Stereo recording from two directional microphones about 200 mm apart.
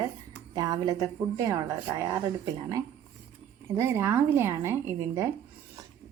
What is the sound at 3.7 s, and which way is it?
Speech, 15° right (ahead or behind).